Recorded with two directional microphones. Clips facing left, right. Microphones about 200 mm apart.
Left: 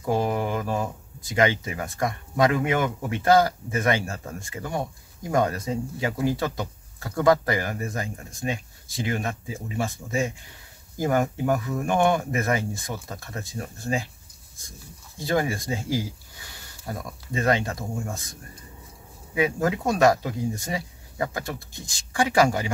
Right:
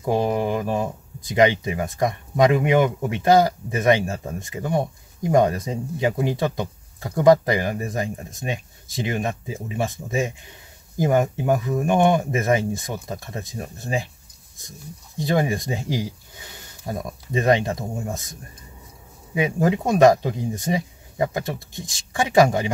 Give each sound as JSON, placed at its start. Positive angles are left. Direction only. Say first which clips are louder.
{"t": 0.1, "sound": "speech", "louder": "right 3 dB", "side_deg": -20}
{"t": 15.1, "sound": "speech", "louder": "right 3 dB", "side_deg": -20}
{"t": 19.3, "sound": "speech", "louder": "right 3 dB", "side_deg": -20}